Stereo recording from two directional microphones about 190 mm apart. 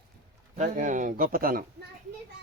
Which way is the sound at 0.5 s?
40° right (ahead or behind).